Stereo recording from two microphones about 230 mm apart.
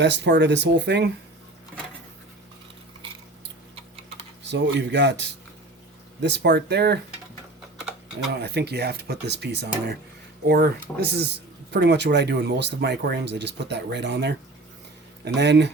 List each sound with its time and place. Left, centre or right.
0.0 s speech: right
4.4 s speech: right
7.8 s typing: centre
8.3 s speech: right